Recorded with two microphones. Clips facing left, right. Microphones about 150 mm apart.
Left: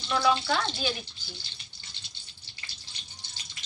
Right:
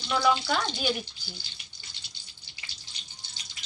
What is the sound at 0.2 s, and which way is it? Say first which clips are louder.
Speech: even; 10° right (ahead or behind).